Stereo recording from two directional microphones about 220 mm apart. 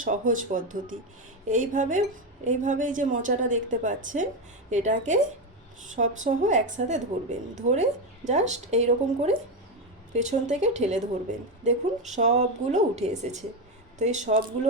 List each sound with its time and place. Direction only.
0.0 s a woman's voice: 35° right (ahead or behind)